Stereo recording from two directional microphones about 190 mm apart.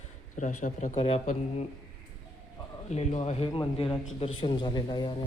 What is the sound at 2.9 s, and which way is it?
A man's voice, 35° left (ahead or behind).